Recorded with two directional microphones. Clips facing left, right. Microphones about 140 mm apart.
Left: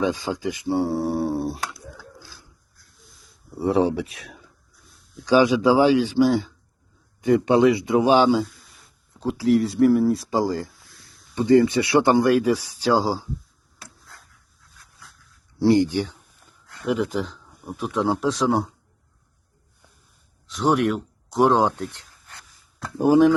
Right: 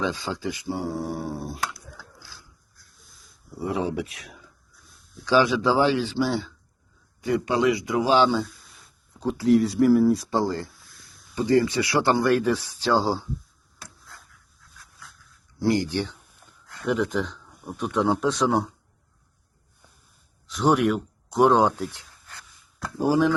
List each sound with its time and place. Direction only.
0.0 s speech: 15° left (ahead or behind); by 1.8 s 30° left (ahead or behind)
2.0 s a sound: 20° left (ahead or behind)
3.5 s speech: 30° left (ahead or behind)
5.2 s a man's voice: 15° left (ahead or behind)
9.2 s speech: centre (ahead or behind)
10.2 s speech: 10° left (ahead or behind)
11.3 s speech: 20° left (ahead or behind)
15.5 s speech: 25° left (ahead or behind)
15.9 s speech: 10° left (ahead or behind)
20.5 s speech: centre (ahead or behind)
22.8 s speech: 20° left (ahead or behind)